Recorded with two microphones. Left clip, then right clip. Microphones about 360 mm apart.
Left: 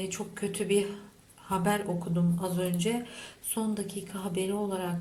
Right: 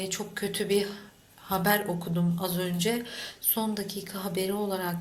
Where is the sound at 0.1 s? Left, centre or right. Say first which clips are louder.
Right 3 dB; centre.